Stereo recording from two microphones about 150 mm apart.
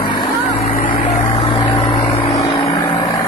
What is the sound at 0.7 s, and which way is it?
Vehicle, 65° left (ahead or behind).